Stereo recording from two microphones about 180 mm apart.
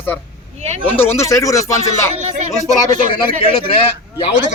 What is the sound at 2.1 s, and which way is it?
Speech, 40° right (ahead or behind).